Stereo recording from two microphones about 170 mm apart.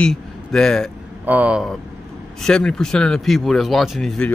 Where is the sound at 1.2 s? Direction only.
10° right (ahead or behind).